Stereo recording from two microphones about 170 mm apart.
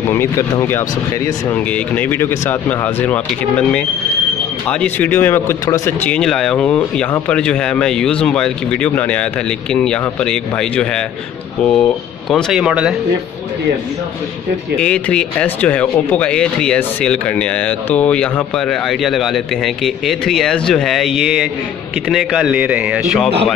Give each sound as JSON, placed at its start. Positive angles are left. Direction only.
{"t": 0.1, "sound": "speech", "side_deg": 15}
{"t": 14.8, "sound": "speech", "side_deg": 5}